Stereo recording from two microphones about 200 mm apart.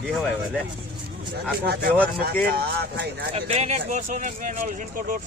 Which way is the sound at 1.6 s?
55° right (ahead or behind).